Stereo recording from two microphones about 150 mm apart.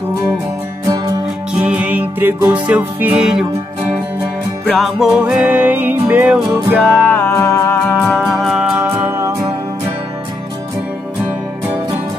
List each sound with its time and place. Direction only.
0.8 s music: 25° right (ahead or behind)
1.5 s music: 10° right (ahead or behind)
4.6 s music: centre (ahead or behind)
6.8 s music: 5° left (ahead or behind)
8.0 s music: centre (ahead or behind)
8.8 s music: 15° right (ahead or behind)